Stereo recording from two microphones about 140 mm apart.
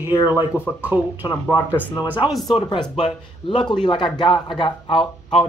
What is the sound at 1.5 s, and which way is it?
Speech, 15° left (ahead or behind).